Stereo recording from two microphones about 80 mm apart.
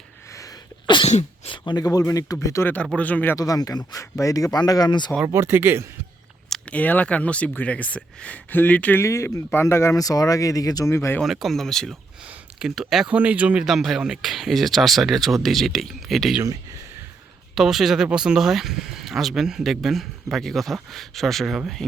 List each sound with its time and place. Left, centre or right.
1.5 s a sound: left
1.8 s speech: left
2.9 s speech: centre
3.3 s speech: left
5.2 s speech: right
6.7 s speech: centre
9.0 s speech: left
10.0 s speech: left
10.8 s speech: left
11.2 s speech: centre
12.5 s speech: centre
13.1 s speech: centre
13.7 s speech: centre
17.5 s speech: centre